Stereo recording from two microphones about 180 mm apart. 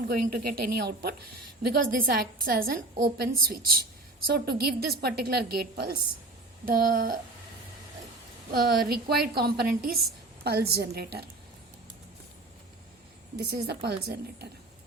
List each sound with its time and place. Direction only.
0.1 s a woman's voice: 55° right (ahead or behind)
8.5 s a woman's voice: 60° right (ahead or behind)
13.4 s a woman's voice: 65° right (ahead or behind)